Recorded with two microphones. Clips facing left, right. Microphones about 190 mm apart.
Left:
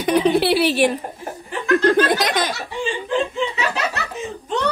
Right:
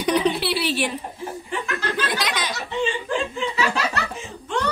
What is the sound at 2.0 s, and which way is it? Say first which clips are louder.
Speech: left 6 dB; 50° left (ahead or behind).